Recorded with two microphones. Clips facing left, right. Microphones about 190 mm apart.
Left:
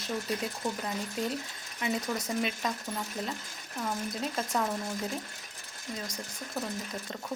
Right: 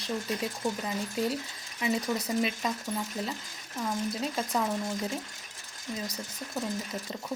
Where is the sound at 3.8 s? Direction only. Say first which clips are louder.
Right 2 dB; centre (ahead or behind).